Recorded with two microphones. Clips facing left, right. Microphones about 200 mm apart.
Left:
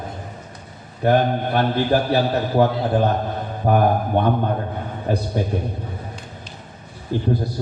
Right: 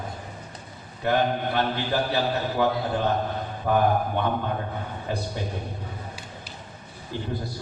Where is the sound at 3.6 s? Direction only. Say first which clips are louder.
Left 4 dB; 50° left (ahead or behind).